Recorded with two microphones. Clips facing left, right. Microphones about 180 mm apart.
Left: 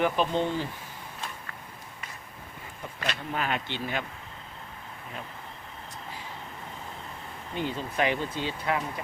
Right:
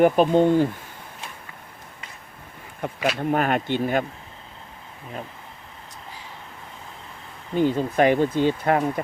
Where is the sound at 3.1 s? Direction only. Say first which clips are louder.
Right 9 dB; 50° right (ahead or behind).